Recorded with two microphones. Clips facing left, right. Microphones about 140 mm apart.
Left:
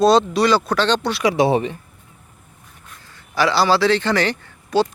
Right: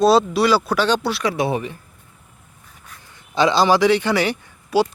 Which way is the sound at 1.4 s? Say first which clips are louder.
Left 5 dB; 25° left (ahead or behind).